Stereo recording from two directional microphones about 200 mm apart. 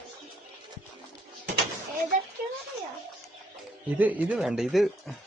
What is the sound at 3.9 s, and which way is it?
Speech, 5° right (ahead or behind).